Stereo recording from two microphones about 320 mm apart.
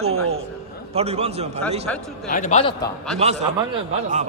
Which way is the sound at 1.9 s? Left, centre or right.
Centre.